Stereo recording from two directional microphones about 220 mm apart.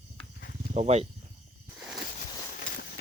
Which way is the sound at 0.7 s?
30° right (ahead or behind).